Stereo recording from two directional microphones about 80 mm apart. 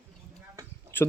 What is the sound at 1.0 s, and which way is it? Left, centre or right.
Speech, left.